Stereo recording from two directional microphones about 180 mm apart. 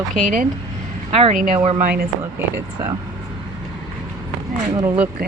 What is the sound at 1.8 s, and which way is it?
Speech, 55° right (ahead or behind).